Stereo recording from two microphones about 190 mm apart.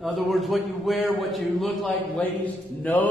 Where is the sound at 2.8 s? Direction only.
10° left (ahead or behind).